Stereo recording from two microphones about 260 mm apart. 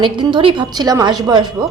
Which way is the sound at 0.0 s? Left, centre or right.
Centre.